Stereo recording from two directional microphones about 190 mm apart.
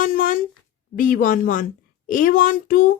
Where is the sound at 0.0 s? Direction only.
45° left (ahead or behind).